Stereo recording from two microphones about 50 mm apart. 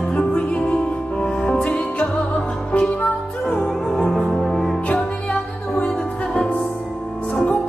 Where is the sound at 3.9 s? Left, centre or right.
Centre.